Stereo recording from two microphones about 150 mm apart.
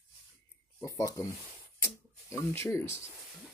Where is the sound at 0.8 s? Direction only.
20° left (ahead or behind).